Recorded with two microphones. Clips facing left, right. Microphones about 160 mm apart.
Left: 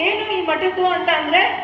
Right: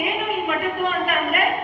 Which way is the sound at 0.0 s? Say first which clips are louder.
Left 4 dB; 90° left.